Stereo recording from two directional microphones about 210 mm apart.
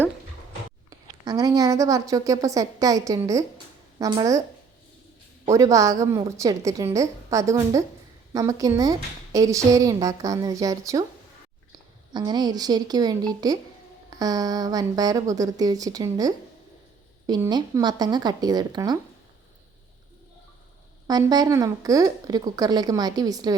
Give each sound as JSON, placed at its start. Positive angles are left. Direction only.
{"t": 0.9, "sound": "a woman's voice", "side_deg": -15}
{"t": 5.5, "sound": "a woman's voice", "side_deg": -15}
{"t": 12.1, "sound": "a woman's voice", "side_deg": -20}
{"t": 21.1, "sound": "a woman's voice", "side_deg": -20}